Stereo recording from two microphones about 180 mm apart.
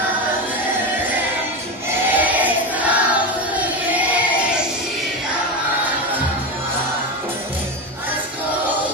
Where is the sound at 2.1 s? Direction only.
10° right (ahead or behind).